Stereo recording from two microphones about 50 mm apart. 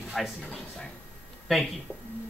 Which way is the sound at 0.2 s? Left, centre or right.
Centre.